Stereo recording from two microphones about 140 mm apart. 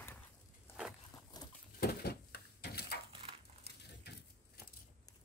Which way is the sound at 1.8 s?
90° left.